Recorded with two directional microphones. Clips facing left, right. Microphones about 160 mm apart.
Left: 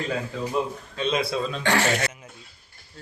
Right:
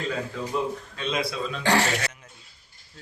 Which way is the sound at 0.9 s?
25° left (ahead or behind).